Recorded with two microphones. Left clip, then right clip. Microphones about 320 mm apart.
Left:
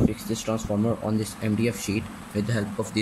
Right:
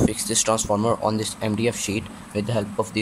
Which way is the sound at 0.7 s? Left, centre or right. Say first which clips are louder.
Right 6 dB; right.